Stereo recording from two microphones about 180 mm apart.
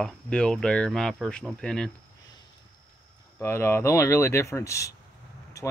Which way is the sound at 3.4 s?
15° left (ahead or behind).